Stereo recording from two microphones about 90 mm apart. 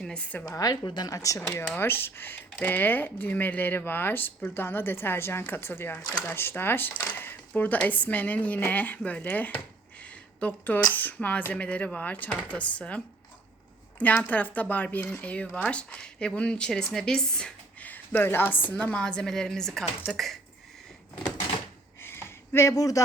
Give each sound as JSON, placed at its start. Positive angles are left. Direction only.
{"t": 0.0, "sound": "a woman's voice", "side_deg": 10}
{"t": 0.4, "sound": "a woman's voice", "side_deg": 45}
{"t": 1.7, "sound": "speech", "side_deg": 25}
{"t": 10.0, "sound": "a sound", "side_deg": 20}
{"t": 10.9, "sound": "speech", "side_deg": 20}
{"t": 14.0, "sound": "speech", "side_deg": 15}
{"t": 22.0, "sound": "a sound", "side_deg": 25}